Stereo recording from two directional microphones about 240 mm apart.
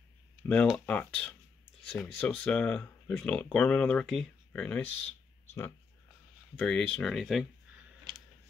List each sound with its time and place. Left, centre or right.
0.5 s speech: centre
6.6 s speech: centre
8.1 s a sound: right